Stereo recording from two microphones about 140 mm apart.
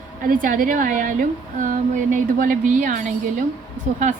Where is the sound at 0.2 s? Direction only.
75° right (ahead or behind).